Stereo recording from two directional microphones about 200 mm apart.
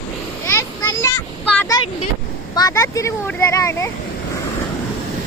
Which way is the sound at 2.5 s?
15° left (ahead or behind).